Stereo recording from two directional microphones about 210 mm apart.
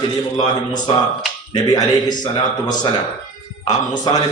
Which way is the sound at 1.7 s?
20° left (ahead or behind).